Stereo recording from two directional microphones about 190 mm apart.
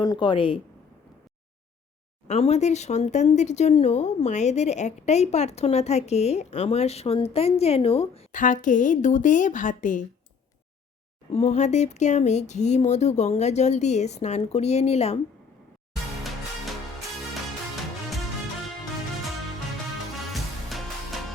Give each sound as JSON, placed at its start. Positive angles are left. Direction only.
{"t": 0.0, "sound": "speech", "side_deg": 25}
{"t": 2.2, "sound": "speech", "side_deg": 35}
{"t": 11.3, "sound": "speech", "side_deg": 35}
{"t": 20.3, "sound": "music", "side_deg": 0}